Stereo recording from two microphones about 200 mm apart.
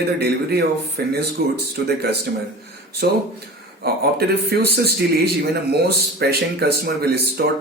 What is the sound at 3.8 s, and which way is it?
Speech, 55° right (ahead or behind).